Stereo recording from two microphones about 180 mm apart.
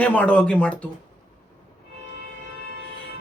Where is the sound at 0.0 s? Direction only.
10° left (ahead or behind).